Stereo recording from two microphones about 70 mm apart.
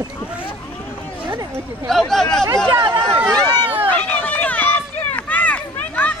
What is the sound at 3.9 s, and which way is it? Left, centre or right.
Run, left.